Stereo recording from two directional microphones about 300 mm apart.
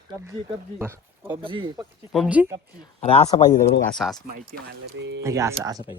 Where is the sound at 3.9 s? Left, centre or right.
Centre.